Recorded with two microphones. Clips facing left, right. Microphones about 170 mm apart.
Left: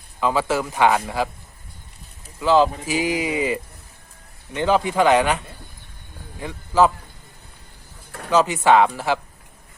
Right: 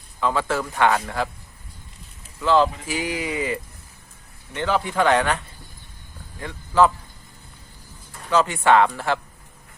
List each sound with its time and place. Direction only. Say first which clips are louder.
0.2 s speech: left 2 dB; 10° left (ahead or behind)
2.4 s speech: left 2 dB; 10° left (ahead or behind)
6.4 s speech: left 1 dB; 10° left (ahead or behind)
8.3 s speech: left 2 dB; 15° left (ahead or behind)